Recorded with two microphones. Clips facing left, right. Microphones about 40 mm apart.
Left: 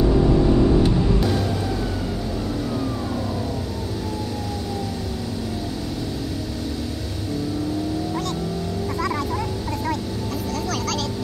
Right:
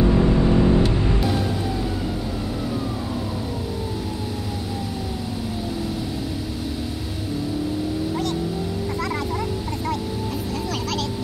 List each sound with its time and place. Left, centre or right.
0.1 s vehicle: right